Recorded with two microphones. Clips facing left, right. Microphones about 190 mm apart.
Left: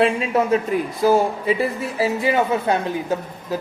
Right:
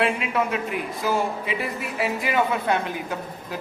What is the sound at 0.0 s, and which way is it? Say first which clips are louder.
A woman's voice: left 5 dB; 35° left (ahead or behind).